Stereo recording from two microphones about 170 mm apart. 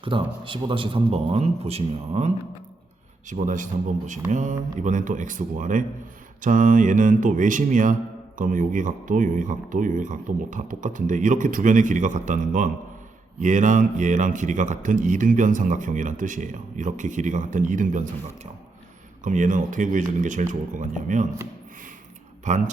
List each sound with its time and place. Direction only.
0.1 s a man's voice: 30° right (ahead or behind); by 18.1 s 50° right (ahead or behind)
19.2 s a man's voice: 50° right (ahead or behind)
22.4 s a man's voice: 45° right (ahead or behind)